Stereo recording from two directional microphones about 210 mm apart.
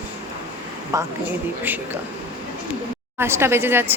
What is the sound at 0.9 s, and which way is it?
Speech, 15° right (ahead or behind).